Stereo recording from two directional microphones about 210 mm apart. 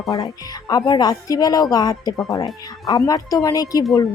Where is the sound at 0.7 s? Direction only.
20° left (ahead or behind).